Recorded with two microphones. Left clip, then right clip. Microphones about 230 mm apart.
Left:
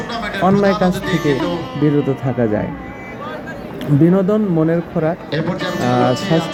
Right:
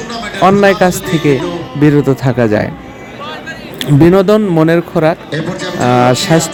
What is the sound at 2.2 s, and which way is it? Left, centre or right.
Speech, right.